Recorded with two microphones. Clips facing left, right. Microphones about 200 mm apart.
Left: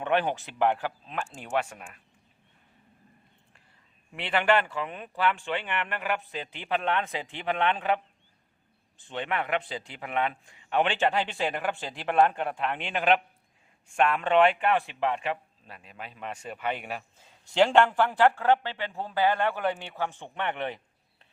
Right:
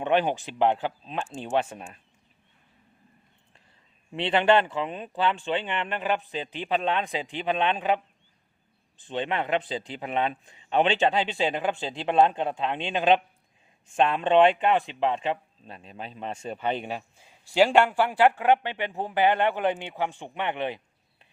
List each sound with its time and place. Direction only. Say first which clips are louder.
0.0 s a man's voice: right 3 dB; 20° right (ahead or behind)
4.1 s a man's voice: right 4 dB; 25° right (ahead or behind)
17.2 s a man's voice: right 2 dB; 10° right (ahead or behind)